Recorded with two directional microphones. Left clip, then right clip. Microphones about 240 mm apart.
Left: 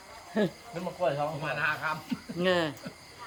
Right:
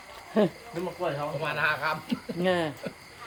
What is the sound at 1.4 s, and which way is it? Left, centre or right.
Speech, right.